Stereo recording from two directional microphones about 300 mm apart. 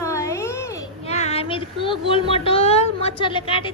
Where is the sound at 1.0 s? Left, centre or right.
Left.